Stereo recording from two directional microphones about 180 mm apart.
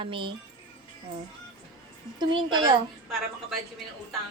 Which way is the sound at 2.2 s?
25° right (ahead or behind).